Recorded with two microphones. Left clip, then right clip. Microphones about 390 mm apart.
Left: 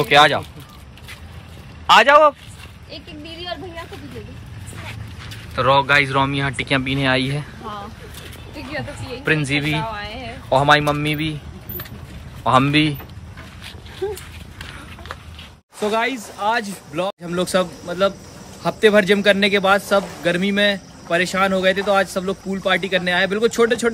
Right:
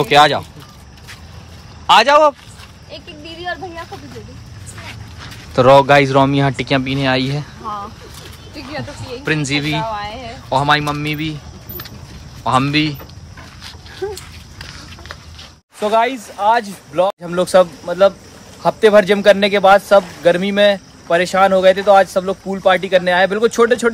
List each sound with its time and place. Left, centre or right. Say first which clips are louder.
0.0 s speech: right 2 dB; centre
1.9 s speech: right 1 dB; centre
5.6 s speech: right 6 dB; centre
9.2 s speech: right 1 dB; centre
9.7 s a sound: right 4 dB; right
10.5 s a man's voice: even; centre
15.8 s a man's voice: right 5 dB; centre